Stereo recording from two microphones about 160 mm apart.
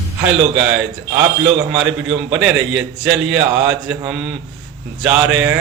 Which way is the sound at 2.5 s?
90° right.